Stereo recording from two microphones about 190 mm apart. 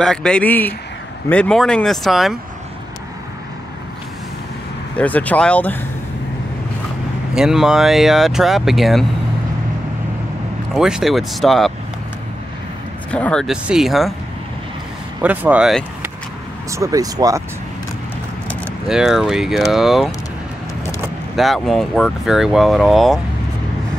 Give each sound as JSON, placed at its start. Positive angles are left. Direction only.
{"t": 0.0, "sound": "speech", "side_deg": 5}
{"t": 4.9, "sound": "speech", "side_deg": 10}
{"t": 7.3, "sound": "speech", "side_deg": -5}
{"t": 10.7, "sound": "speech", "side_deg": -5}
{"t": 13.1, "sound": "speech", "side_deg": 5}
{"t": 15.2, "sound": "speech", "side_deg": -5}
{"t": 16.7, "sound": "speech", "side_deg": -15}
{"t": 18.9, "sound": "speech", "side_deg": 0}
{"t": 21.4, "sound": "speech", "side_deg": 0}